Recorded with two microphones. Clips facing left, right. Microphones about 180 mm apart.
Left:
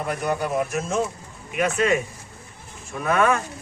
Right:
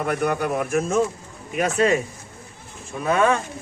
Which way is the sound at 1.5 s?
35° right (ahead or behind).